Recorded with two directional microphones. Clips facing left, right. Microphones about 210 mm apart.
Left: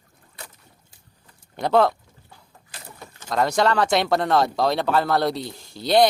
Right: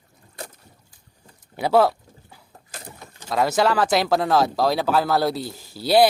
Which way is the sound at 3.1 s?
5° right (ahead or behind).